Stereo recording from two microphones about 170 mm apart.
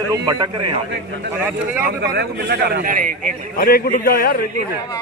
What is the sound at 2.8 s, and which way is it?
Speech, 50° right (ahead or behind).